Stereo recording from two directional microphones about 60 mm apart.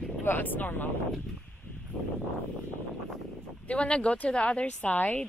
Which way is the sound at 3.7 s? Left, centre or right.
Centre.